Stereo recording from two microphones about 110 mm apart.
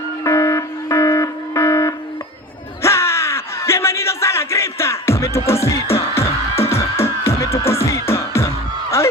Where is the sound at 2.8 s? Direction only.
25° left (ahead or behind).